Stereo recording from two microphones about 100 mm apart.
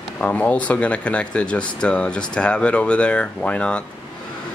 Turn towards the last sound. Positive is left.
turn(degrees=10)  # may be behind; listen again after turning